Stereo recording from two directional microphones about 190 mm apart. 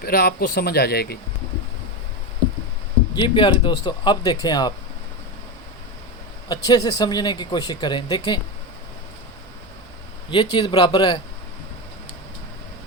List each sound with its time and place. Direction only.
0.0 s speech: 55° left (ahead or behind)
3.2 s speech: 25° left (ahead or behind)
6.7 s speech: 20° left (ahead or behind)
10.2 s speech: 25° left (ahead or behind)